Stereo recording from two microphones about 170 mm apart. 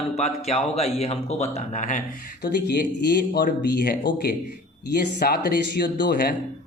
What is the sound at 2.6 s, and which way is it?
Speech, 80° left.